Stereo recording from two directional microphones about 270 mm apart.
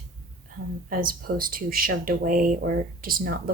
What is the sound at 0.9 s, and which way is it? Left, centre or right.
Speech, right.